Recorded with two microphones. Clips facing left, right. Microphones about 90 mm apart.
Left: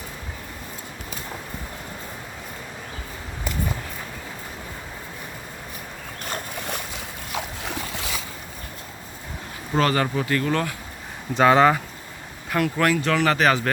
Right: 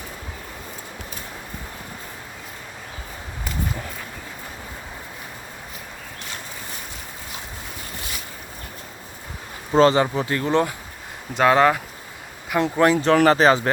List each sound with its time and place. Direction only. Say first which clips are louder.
7.3 s boat: left 10 dB; 90° left
9.7 s speech: right 5 dB; 25° right (ahead or behind)
11.3 s speech: even; centre (ahead or behind)
12.5 s speech: right 3 dB; 25° right (ahead or behind)